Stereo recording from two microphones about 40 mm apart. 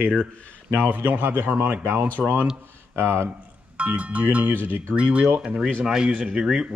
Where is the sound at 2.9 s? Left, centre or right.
Right.